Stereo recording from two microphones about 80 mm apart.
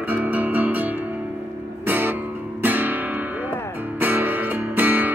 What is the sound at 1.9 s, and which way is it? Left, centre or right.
Music, right.